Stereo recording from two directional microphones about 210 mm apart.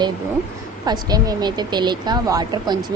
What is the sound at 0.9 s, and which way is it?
Speech, 20° right (ahead or behind).